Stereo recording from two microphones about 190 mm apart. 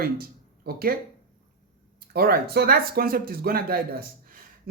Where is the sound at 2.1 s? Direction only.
55° right (ahead or behind).